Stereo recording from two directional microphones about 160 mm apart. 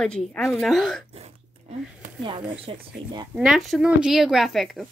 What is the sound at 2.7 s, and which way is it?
Speech, 35° right (ahead or behind).